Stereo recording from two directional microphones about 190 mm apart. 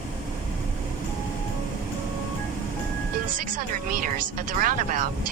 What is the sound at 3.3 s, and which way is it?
Speech, 45° right (ahead or behind).